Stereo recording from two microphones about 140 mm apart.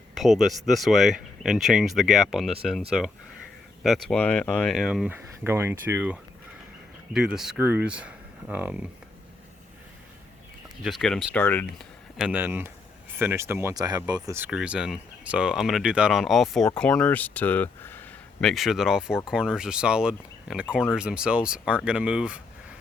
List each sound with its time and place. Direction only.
0.1 s speech: centre (ahead or behind)
3.8 s speech: 5° left (ahead or behind)
5.0 s speech: 15° right (ahead or behind)
10.8 s speech: centre (ahead or behind)
12.1 s speech: 5° right (ahead or behind)
12.4 s speech: 15° right (ahead or behind)
14.3 s speech: 10° right (ahead or behind)